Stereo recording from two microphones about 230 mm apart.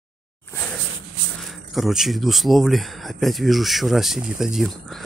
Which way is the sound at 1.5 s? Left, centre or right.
Centre.